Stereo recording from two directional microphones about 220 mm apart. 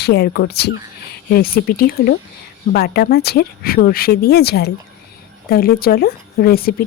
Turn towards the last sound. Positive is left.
turn(degrees=45)  # may be behind; listen again after turning